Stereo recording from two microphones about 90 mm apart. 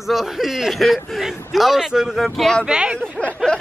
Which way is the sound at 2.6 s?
10° right (ahead or behind).